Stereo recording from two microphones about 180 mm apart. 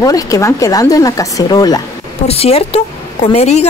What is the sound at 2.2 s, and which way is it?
A woman's voice, 35° left (ahead or behind).